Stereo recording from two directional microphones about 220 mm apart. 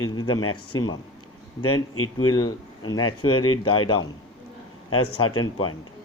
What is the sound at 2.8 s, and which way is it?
Speech, 20° left (ahead or behind).